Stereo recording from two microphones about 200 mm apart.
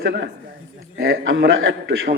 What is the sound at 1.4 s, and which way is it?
Music, 75° right (ahead or behind).